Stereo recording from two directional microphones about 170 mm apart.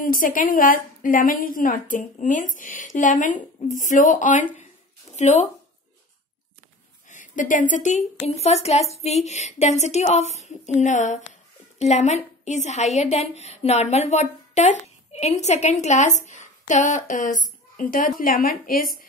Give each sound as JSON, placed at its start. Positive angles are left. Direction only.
{"t": 0.0, "sound": "a woman's voice", "side_deg": 55}
{"t": 7.1, "sound": "a sound", "side_deg": 50}
{"t": 7.7, "sound": "a woman's voice", "side_deg": 45}